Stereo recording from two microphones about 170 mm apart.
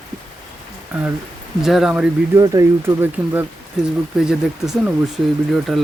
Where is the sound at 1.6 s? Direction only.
Centre (ahead or behind).